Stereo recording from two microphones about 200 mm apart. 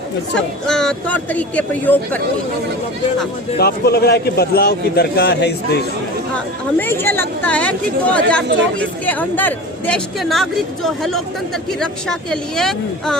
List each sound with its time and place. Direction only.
0.3 s speech: 5° left (ahead or behind)
3.6 s a man's voice: 50° left (ahead or behind)
6.7 s speech: 10° left (ahead or behind)